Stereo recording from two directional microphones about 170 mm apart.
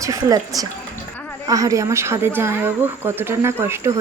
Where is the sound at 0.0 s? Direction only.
20° right (ahead or behind).